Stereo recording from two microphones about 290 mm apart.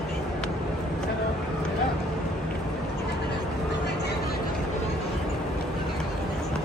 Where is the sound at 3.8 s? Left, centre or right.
Left.